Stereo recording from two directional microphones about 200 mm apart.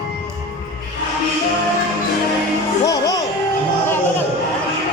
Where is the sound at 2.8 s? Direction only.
20° left (ahead or behind).